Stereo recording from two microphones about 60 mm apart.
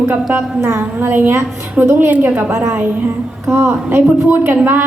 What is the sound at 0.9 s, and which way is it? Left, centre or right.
A woman's voice, right.